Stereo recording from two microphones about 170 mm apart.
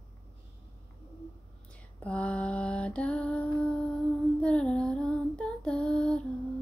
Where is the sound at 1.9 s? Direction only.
5° left (ahead or behind).